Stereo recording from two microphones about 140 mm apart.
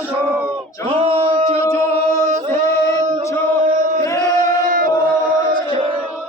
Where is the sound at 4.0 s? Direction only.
75° right (ahead or behind).